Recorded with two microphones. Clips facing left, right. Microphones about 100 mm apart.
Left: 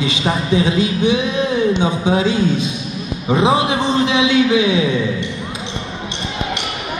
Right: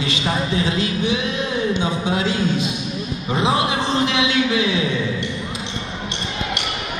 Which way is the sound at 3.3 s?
20° left (ahead or behind).